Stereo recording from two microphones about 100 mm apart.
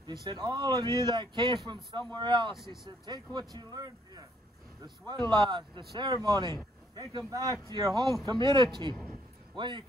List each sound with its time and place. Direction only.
0.0 s speech: 50° right (ahead or behind)
2.5 s speech: 5° right (ahead or behind)
2.8 s speech: 45° right (ahead or behind)